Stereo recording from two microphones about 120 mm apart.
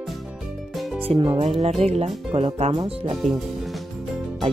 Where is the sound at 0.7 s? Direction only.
Centre (ahead or behind).